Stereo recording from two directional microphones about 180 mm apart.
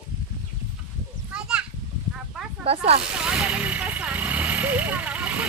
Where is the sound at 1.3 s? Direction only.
5° right (ahead or behind).